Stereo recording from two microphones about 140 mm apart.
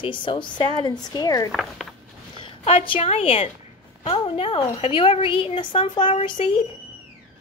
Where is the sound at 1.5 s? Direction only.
Centre (ahead or behind).